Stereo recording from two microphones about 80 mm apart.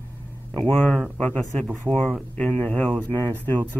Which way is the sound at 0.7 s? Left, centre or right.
Centre.